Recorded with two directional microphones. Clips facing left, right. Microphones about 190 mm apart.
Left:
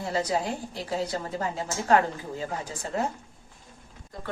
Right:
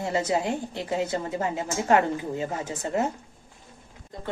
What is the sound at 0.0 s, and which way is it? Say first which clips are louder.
A woman's voice: right 2 dB; 25° right (ahead or behind).